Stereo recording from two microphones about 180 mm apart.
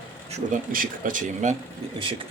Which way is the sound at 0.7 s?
50° right (ahead or behind).